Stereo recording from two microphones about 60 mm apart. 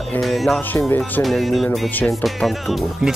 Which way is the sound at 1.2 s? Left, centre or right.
Centre.